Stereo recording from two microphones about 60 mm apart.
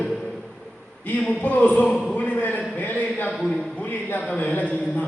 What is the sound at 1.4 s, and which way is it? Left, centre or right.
A man's voice, left.